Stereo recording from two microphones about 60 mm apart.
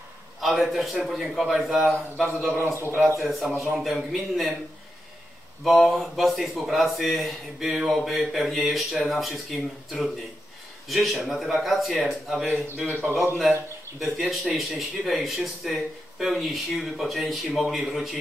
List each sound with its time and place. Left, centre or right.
0.4 s a man's voice: centre
5.6 s speech: centre
7.8 s a sound: centre
8.3 s speech: centre
12.8 s a man's voice: right
13.4 s speech: centre